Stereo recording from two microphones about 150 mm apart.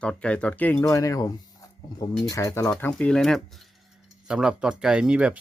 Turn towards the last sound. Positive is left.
turn(degrees=-5)  # may be behind; listen again after turning